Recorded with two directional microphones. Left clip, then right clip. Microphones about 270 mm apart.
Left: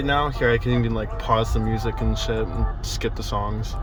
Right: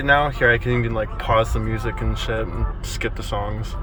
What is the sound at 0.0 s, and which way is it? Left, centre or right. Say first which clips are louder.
Speech: right 5 dB; centre.